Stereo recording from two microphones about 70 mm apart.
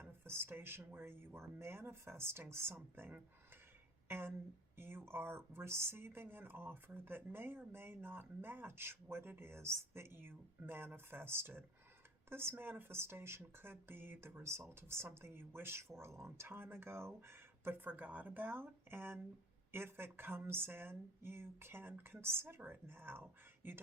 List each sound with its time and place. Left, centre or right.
0.0 s speech: right
16.5 s speech: right